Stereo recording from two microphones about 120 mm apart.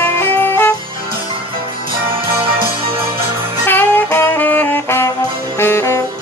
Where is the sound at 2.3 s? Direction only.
45° right (ahead or behind).